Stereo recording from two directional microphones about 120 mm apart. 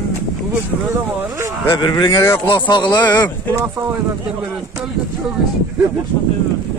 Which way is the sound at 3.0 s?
15° left (ahead or behind).